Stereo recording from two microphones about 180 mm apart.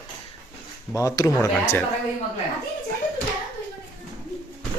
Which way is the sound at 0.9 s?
20° left (ahead or behind).